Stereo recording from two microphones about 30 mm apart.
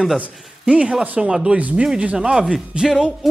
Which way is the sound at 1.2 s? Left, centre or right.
Right.